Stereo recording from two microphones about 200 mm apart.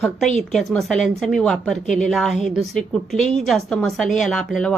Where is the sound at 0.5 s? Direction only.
Centre (ahead or behind).